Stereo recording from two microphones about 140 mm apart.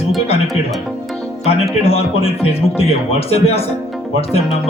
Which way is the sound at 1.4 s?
45° left (ahead or behind).